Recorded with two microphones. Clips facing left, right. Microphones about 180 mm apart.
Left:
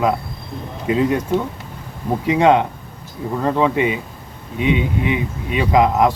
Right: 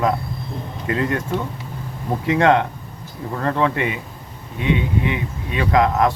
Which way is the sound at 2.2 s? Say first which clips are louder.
Left 2 dB; 15° left (ahead or behind).